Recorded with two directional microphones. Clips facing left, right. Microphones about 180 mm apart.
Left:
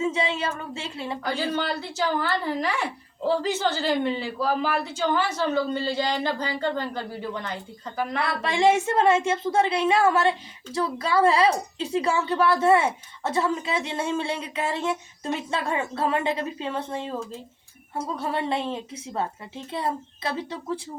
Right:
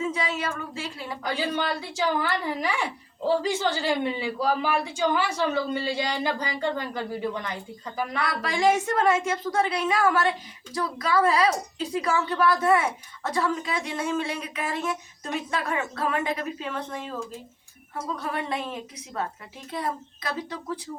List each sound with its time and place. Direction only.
0.0 s a woman's voice: 25° left (ahead or behind)
1.2 s a man's voice: 10° right (ahead or behind)
8.2 s a woman's voice: 25° left (ahead or behind)
18.2 s a woman's voice: 25° left (ahead or behind)